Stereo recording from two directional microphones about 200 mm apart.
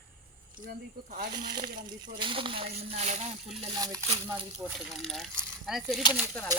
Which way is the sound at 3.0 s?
35° right (ahead or behind).